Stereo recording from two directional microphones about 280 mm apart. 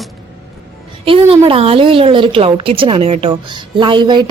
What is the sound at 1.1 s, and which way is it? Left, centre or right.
A woman's voice, centre.